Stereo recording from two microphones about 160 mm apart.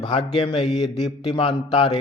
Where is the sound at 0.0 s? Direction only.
35° left (ahead or behind).